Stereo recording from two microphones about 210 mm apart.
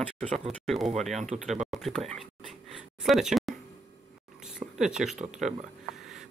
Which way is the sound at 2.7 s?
Centre (ahead or behind).